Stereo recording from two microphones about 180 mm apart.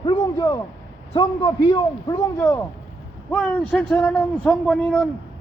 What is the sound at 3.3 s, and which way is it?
A man's voice, 5° left (ahead or behind).